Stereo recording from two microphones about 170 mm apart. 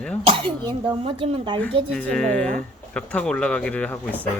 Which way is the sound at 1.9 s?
5° left (ahead or behind).